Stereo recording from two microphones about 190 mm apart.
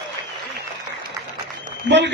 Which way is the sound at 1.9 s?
70° right (ahead or behind).